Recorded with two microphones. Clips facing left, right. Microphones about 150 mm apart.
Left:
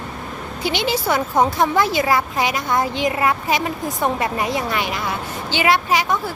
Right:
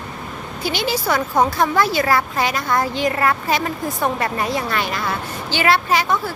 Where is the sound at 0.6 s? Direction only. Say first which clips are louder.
Left 1 dB; 20° left (ahead or behind).